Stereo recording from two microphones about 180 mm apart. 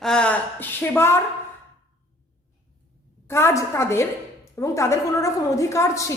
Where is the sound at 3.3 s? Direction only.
15° left (ahead or behind).